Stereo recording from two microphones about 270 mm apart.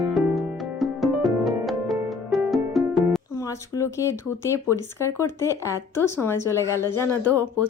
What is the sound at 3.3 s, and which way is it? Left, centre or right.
Speech, centre.